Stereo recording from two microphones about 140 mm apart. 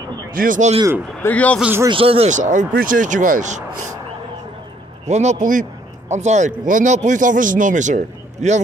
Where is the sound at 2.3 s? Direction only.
60° right (ahead or behind).